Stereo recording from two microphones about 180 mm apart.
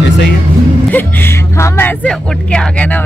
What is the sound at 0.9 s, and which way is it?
Speech, 10° left (ahead or behind).